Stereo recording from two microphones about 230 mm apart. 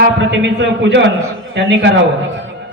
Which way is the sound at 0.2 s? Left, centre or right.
Right.